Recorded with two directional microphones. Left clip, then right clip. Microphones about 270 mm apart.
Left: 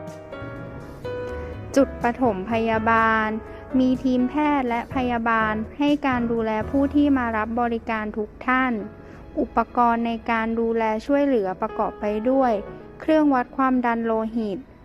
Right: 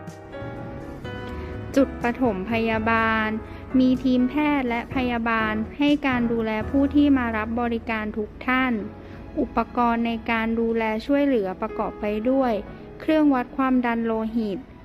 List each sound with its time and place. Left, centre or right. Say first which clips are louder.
1.7 s a woman's voice: left 2 dB; centre